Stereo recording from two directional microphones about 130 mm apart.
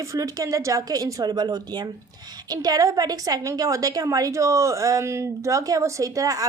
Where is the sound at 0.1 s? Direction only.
25° right (ahead or behind).